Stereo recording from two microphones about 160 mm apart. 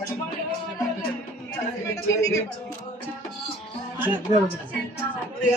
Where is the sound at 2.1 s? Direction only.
20° left (ahead or behind).